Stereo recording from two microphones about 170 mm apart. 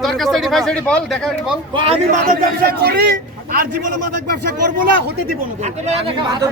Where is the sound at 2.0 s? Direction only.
55° right (ahead or behind).